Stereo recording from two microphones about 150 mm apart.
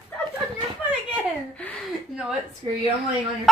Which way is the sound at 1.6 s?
10° left (ahead or behind).